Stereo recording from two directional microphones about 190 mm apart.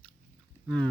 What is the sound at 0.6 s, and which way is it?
Speech, 5° left (ahead or behind).